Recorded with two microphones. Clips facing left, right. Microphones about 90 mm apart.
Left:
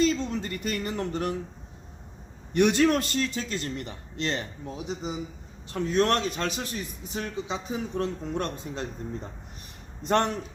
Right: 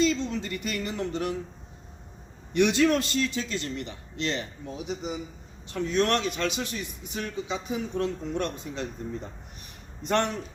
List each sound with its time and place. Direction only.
0.0 s a man's voice: 45° left (ahead or behind)
2.5 s a man's voice: 45° left (ahead or behind)
5.7 s a man's voice: 35° left (ahead or behind)
10.0 s a man's voice: 35° left (ahead or behind)